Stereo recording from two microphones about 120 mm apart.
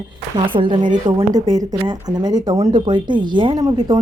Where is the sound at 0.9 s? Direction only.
90° right.